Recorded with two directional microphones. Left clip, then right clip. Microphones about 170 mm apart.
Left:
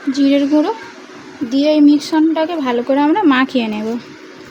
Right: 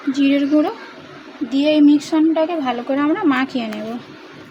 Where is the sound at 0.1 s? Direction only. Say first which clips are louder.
Left 3 dB; 50° left (ahead or behind).